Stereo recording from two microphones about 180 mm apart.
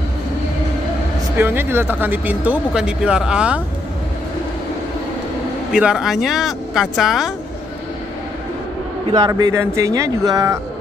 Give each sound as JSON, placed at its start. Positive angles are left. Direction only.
{"t": 1.4, "sound": "speech", "side_deg": -10}
{"t": 5.7, "sound": "speech", "side_deg": -5}
{"t": 9.1, "sound": "speech", "side_deg": -20}